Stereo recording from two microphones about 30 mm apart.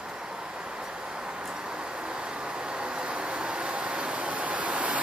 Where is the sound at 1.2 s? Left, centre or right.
Right.